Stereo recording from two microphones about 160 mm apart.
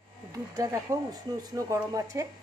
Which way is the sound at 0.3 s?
20° right (ahead or behind).